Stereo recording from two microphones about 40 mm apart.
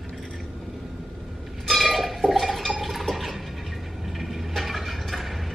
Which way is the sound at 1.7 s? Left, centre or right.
Centre.